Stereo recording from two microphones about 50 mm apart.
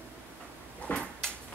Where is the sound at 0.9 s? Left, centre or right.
Left.